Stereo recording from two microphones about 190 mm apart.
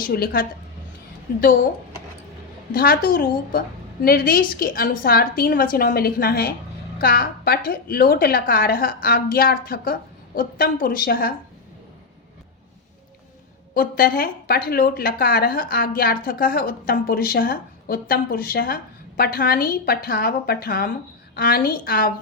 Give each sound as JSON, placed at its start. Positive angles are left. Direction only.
{"t": 0.1, "sound": "a woman's voice", "side_deg": 50}
{"t": 2.7, "sound": "a woman's voice", "side_deg": 50}
{"t": 13.7, "sound": "a woman's voice", "side_deg": 50}